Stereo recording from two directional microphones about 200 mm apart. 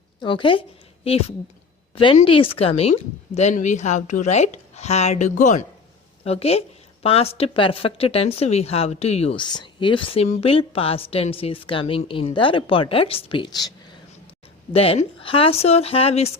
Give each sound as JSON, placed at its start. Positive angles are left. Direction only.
{"t": 0.2, "sound": "a woman's voice", "side_deg": 25}
{"t": 2.0, "sound": "a woman's voice", "side_deg": 25}